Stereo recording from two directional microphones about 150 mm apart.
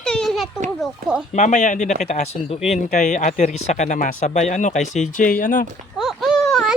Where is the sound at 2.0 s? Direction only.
50° left (ahead or behind).